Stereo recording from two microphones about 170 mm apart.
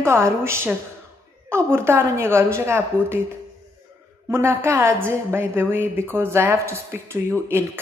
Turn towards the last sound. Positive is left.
turn(degrees=-15)  # may be behind; listen again after turning